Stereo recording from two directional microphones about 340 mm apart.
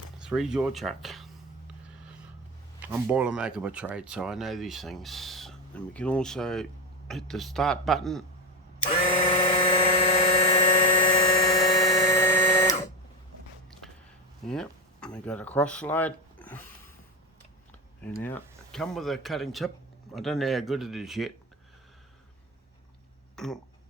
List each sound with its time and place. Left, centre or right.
0.3 s speech: centre
2.8 s speech: centre
9.3 s helicopter: centre
14.4 s speech: centre
18.0 s speech: centre
23.3 s speech: centre